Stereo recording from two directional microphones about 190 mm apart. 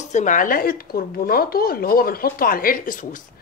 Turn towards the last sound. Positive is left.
turn(degrees=45)  # may be behind; listen again after turning